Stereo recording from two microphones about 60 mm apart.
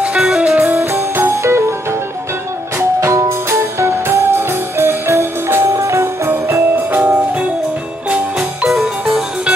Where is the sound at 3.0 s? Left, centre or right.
Right.